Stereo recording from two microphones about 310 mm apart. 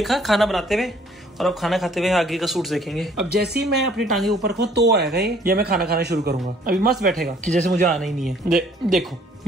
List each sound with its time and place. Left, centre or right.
0.0 s a man's voice: centre
3.3 s speech: right
3.6 s a man's voice: centre
4.5 s speech: right
7.9 s a man's voice: centre